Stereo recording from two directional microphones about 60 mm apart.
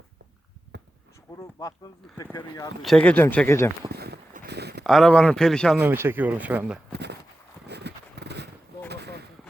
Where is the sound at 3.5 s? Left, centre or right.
Left.